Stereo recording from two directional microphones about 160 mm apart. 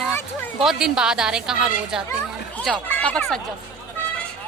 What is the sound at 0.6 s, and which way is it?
Speech, 5° right (ahead or behind).